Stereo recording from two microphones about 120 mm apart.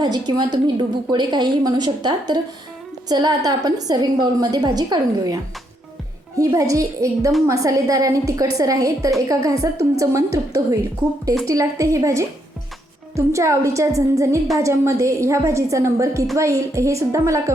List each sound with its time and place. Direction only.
0.0 s a woman's voice: 35° right (ahead or behind)
6.4 s a woman's voice: 30° right (ahead or behind)